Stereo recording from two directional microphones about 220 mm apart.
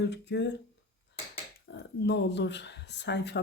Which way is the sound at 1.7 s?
50° left (ahead or behind).